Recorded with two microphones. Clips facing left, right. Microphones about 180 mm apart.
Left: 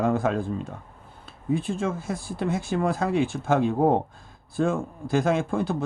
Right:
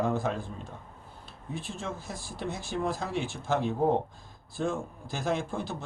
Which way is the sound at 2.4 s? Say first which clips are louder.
Left 6 dB; 60° left (ahead or behind).